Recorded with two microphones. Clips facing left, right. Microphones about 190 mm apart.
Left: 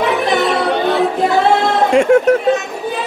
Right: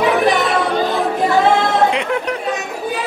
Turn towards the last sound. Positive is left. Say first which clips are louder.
# left 9 dB
turn(degrees=45)  # may be behind; listen again after turning